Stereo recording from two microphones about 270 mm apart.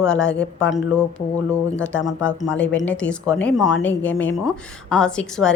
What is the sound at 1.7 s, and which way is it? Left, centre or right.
Speech, centre.